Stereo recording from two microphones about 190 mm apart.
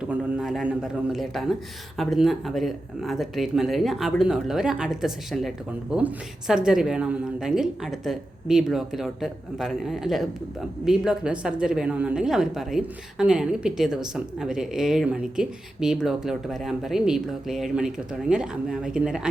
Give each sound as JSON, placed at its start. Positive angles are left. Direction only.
{"t": 0.1, "sound": "speech", "side_deg": -5}